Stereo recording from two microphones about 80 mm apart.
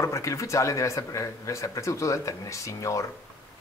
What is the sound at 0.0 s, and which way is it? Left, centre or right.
Speech, left.